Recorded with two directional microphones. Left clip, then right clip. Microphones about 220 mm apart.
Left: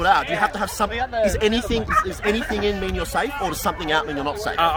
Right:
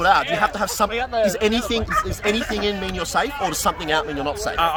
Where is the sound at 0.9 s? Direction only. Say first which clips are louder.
Left 1 dB; 40° right (ahead or behind).